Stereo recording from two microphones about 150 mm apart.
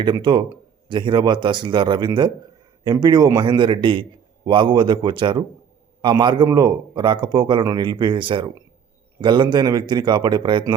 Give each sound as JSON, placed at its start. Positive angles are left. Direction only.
{"t": 0.0, "sound": "speech", "side_deg": -35}